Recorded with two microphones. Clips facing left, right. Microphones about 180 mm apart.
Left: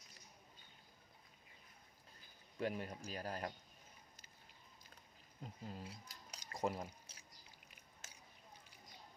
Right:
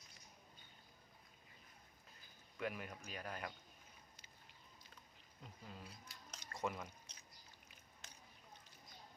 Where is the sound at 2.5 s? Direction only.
30° left (ahead or behind).